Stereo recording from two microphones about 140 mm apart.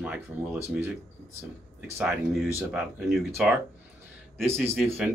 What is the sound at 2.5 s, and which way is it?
Speech, 15° right (ahead or behind).